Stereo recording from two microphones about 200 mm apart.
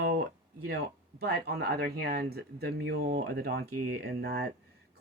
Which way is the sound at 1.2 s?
55° right (ahead or behind).